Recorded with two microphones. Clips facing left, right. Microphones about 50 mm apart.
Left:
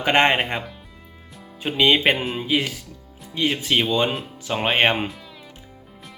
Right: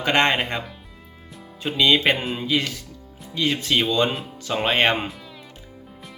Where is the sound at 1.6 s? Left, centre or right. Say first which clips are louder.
Left 1 dB; left.